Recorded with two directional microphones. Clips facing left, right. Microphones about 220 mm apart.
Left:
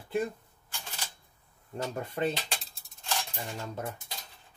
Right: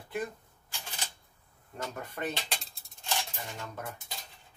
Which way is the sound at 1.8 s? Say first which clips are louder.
Left 5 dB; 30° left (ahead or behind).